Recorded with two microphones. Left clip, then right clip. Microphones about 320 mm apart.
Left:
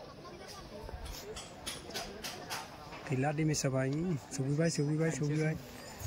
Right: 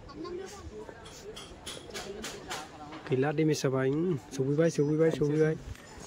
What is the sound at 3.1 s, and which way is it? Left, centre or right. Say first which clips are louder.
Speech: right 6 dB; centre.